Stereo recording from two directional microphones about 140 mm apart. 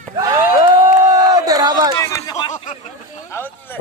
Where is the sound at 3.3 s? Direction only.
15° left (ahead or behind).